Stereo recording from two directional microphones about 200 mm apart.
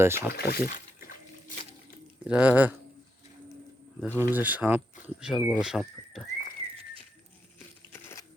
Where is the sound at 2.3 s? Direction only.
5° right (ahead or behind).